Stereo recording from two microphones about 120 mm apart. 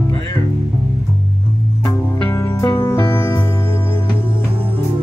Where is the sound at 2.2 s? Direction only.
25° left (ahead or behind).